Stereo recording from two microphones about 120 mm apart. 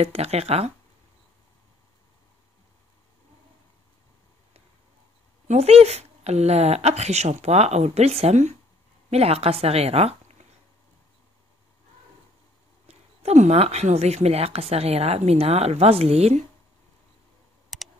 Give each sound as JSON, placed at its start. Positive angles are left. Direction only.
{"t": 0.0, "sound": "speech", "side_deg": -60}
{"t": 5.5, "sound": "speech", "side_deg": -60}
{"t": 9.1, "sound": "speech", "side_deg": -60}
{"t": 12.8, "sound": "speech", "side_deg": -65}
{"t": 17.7, "sound": "computer keyboard", "side_deg": 0}